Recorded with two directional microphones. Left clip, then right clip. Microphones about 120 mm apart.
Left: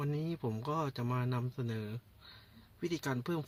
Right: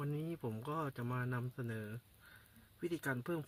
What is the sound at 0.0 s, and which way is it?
Speech, 25° left (ahead or behind).